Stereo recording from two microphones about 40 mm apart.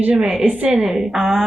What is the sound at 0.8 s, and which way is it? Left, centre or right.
Speech, centre.